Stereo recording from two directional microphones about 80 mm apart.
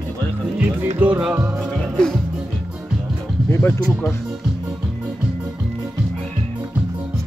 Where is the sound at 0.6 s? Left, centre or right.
Centre.